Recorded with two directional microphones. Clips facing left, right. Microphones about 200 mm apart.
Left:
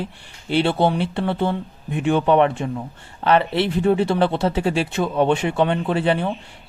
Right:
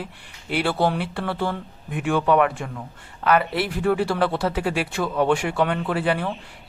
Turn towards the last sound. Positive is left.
turn(degrees=25)  # may be behind; listen again after turning